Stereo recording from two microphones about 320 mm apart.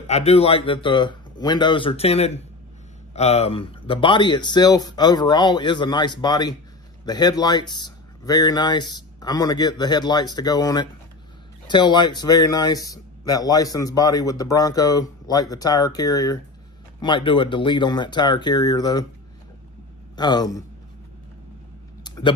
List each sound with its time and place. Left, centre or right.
0.0 s speech: centre
20.2 s speech: centre
22.0 s a sound: centre